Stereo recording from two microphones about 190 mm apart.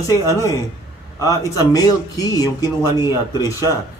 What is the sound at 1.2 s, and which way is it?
Speech, 15° left (ahead or behind).